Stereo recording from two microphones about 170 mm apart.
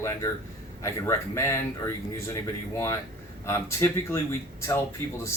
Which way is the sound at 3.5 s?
15° left (ahead or behind).